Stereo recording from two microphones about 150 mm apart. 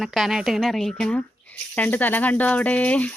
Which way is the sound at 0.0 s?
Centre (ahead or behind).